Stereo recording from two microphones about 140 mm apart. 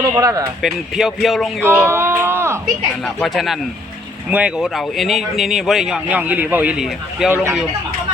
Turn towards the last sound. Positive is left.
turn(degrees=-5)  # may be behind; listen again after turning